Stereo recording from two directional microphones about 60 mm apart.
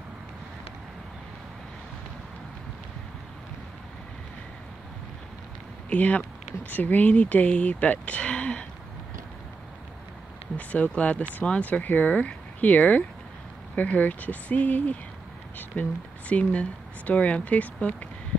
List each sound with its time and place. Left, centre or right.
5.9 s speech: left
10.7 s speech: left